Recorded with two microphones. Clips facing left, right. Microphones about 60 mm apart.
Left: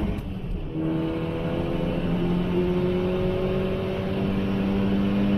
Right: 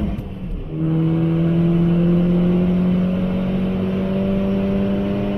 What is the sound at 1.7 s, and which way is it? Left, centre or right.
Vehicle, right.